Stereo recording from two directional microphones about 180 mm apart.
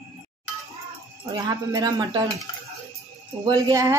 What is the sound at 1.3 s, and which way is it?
Speech, 20° right (ahead or behind).